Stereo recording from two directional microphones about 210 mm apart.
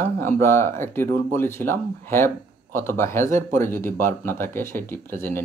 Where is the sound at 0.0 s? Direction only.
10° left (ahead or behind).